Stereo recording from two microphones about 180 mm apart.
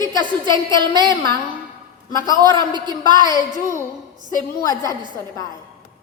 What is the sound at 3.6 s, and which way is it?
Speech, 15° left (ahead or behind).